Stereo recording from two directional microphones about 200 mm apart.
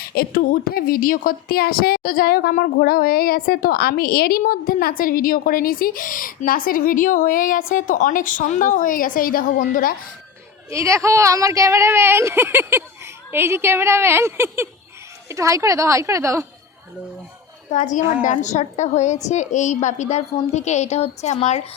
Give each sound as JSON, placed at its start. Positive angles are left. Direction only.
{"t": 0.0, "sound": "a woman's voice", "side_deg": 50}
{"t": 10.7, "sound": "speech", "side_deg": -15}
{"t": 17.7, "sound": "a woman's voice", "side_deg": 35}